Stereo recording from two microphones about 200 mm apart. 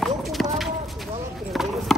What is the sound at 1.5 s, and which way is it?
Chop, centre (ahead or behind).